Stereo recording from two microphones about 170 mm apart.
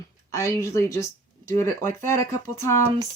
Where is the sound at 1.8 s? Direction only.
50° right (ahead or behind).